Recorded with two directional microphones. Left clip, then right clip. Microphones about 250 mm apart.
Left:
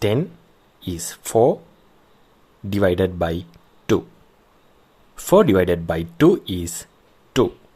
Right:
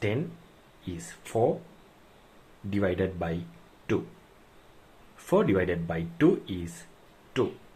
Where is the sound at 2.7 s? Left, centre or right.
Left.